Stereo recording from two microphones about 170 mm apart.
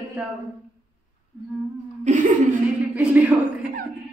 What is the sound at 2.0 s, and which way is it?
Speech, 50° right (ahead or behind).